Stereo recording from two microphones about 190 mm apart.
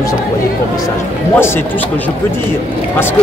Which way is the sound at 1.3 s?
10° left (ahead or behind).